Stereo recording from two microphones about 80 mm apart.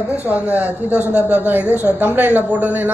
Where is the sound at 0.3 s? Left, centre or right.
Right.